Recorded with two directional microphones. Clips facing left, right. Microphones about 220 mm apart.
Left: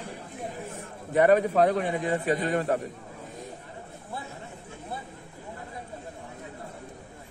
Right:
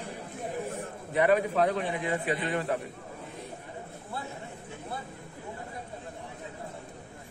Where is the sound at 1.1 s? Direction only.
45° left (ahead or behind).